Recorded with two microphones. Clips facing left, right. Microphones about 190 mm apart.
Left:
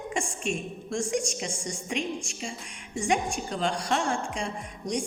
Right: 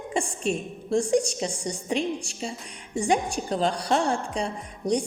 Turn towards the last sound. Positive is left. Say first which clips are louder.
# right 5 dB
turn(degrees=-35)  # may be behind; listen again after turning